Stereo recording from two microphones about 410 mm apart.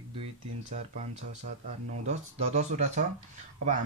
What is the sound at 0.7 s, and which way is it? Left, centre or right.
Speech, centre.